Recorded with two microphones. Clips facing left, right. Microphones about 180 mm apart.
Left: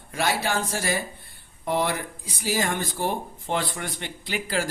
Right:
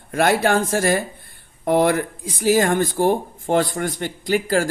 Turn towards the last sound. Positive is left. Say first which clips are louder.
# right 9 dB
turn(degrees=-45)  # may be behind; listen again after turning